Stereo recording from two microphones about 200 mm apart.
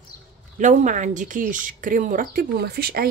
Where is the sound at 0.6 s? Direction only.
40° right (ahead or behind).